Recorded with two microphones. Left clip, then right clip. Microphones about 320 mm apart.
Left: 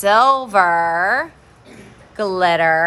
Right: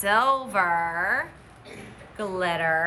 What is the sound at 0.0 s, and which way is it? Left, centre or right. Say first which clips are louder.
Speech: left 9 dB; centre.